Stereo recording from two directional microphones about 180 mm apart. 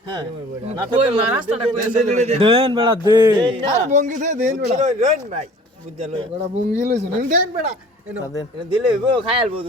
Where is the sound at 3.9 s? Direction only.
45° right (ahead or behind).